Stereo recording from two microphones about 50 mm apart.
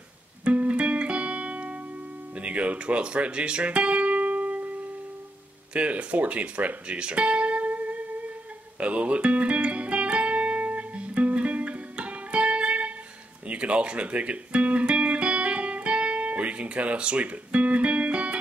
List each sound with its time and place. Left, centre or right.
0.5 s music: right
5.7 s speech: right
7.0 s music: right